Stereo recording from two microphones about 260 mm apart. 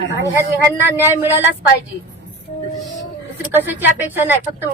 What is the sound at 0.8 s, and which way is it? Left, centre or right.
Speech, centre.